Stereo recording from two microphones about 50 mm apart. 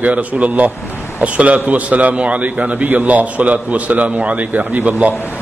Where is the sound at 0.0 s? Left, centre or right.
Right.